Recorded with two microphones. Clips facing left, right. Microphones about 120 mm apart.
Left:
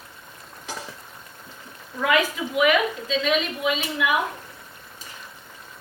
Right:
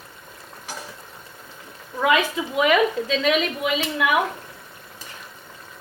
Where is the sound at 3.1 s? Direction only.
60° right (ahead or behind).